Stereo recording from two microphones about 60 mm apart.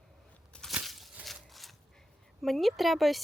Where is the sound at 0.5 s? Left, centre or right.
Centre.